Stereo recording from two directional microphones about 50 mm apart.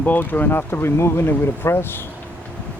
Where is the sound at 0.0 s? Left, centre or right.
Left.